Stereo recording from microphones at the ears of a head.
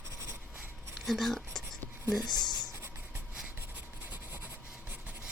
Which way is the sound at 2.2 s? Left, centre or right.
Left.